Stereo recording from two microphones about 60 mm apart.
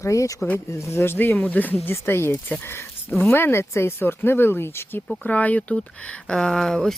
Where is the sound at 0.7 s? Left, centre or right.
Left.